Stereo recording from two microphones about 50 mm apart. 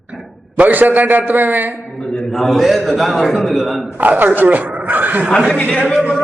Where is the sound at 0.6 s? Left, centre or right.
Right.